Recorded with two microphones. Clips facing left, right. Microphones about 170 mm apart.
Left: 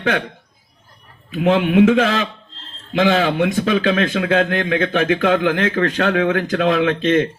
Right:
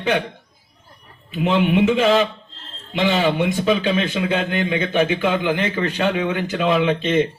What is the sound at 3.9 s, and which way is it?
A man's voice, 90° left.